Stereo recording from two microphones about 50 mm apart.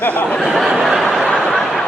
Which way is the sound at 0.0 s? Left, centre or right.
Left.